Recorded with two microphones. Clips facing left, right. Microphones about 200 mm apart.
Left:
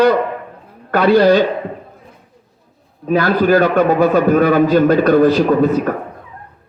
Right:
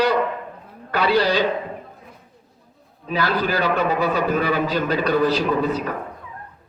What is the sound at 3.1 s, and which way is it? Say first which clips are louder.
A man's voice: left 9 dB; 50° left (ahead or behind).